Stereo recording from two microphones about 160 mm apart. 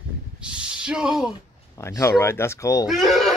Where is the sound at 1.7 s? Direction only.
20° left (ahead or behind).